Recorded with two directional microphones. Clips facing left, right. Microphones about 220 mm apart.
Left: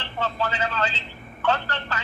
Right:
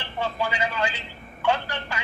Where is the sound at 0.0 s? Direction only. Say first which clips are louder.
Even; 10° right (ahead or behind).